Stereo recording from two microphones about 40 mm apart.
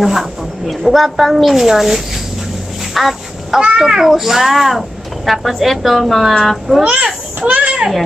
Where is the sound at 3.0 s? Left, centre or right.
Centre.